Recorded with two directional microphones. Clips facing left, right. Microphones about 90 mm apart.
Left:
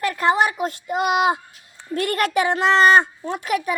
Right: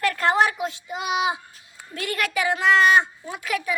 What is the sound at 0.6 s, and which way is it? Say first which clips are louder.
A woman's voice: left 6 dB; 50° left (ahead or behind).